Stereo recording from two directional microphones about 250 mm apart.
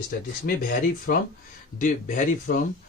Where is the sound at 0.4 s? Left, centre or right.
Left.